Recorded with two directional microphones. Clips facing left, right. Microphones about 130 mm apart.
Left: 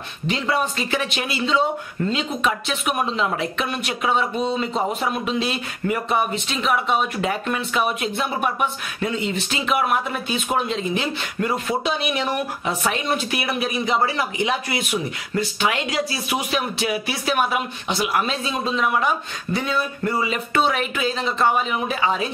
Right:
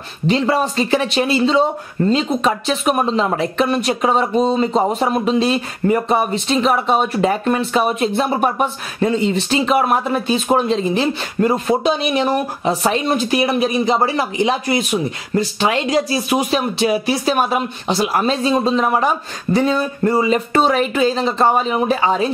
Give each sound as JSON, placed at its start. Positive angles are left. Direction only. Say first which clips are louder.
{"t": 0.3, "sound": "speech", "louder": "right 6 dB", "side_deg": -35}